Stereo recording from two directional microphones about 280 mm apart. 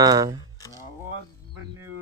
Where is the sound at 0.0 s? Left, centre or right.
Centre.